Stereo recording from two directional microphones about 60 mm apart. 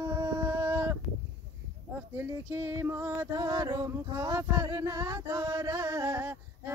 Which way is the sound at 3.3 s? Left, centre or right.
Right.